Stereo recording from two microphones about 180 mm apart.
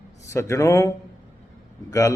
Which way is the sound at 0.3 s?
15° left (ahead or behind).